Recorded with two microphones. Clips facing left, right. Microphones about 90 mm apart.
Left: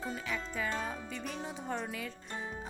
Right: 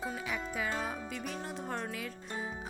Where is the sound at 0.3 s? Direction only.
15° right (ahead or behind).